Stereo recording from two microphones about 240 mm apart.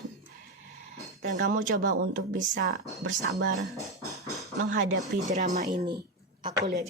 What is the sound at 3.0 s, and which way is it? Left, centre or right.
Speech, right.